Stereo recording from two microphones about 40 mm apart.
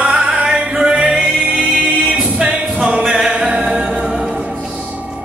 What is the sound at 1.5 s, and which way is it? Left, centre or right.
Music, right.